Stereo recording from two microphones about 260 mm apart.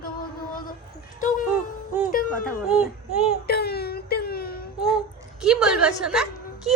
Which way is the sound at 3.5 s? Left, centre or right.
Left.